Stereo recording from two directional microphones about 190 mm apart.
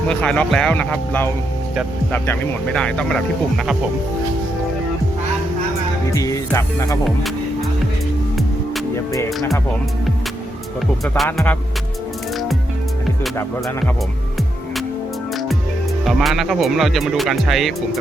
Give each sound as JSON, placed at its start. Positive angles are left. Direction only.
{"t": 0.1, "sound": "speech", "side_deg": 5}
{"t": 6.1, "sound": "speech", "side_deg": 15}
{"t": 11.3, "sound": "speech", "side_deg": 10}
{"t": 13.3, "sound": "speech", "side_deg": 10}
{"t": 16.0, "sound": "speech", "side_deg": 0}